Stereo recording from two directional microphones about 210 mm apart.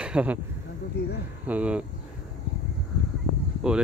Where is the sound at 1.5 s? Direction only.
5° right (ahead or behind).